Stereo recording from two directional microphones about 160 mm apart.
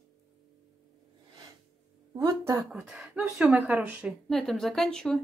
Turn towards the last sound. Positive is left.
turn(degrees=5)  # may be behind; listen again after turning